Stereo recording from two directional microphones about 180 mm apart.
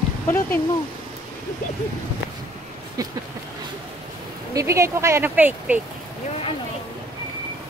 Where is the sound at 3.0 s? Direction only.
20° right (ahead or behind).